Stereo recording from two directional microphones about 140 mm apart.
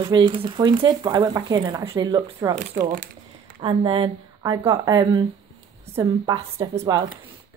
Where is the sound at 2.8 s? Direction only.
70° right (ahead or behind).